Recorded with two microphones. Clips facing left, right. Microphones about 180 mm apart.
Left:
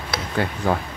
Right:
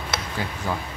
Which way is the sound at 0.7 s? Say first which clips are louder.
Left 6 dB; 60° left (ahead or behind).